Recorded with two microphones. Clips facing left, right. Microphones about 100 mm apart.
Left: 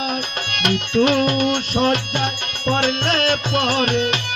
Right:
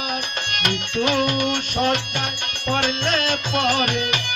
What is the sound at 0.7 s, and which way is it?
Music, 45° left (ahead or behind).